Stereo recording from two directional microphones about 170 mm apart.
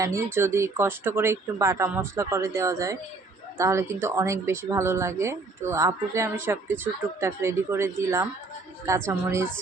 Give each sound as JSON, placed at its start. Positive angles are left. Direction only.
{"t": 0.0, "sound": "a woman's voice", "side_deg": -15}